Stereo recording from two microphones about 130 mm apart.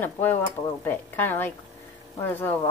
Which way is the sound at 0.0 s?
15° left (ahead or behind).